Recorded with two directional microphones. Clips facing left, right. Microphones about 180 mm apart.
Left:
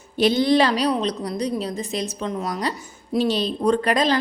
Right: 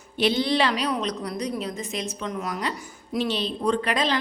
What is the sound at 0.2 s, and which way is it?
A woman's voice, 45° left (ahead or behind).